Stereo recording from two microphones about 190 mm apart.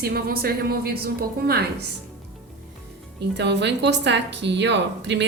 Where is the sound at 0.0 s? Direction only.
55° right (ahead or behind).